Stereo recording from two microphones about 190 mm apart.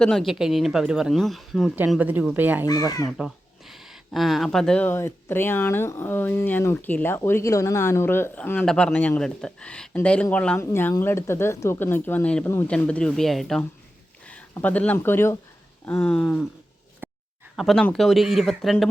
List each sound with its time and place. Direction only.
0.0 s speech: centre (ahead or behind)
2.6 s speech: 20° left (ahead or behind)
3.1 s speech: centre (ahead or behind)
17.0 s a sound: 10° right (ahead or behind)
17.6 s speech: centre (ahead or behind)